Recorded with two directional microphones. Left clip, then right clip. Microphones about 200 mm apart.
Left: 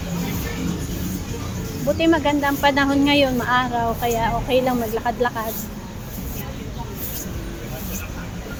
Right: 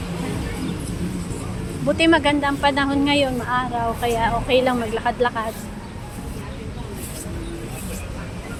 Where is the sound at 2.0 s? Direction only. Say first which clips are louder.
Right 2 dB; centre (ahead or behind).